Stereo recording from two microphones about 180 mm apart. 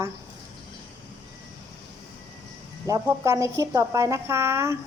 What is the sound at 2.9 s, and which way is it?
A woman's voice, 20° right (ahead or behind).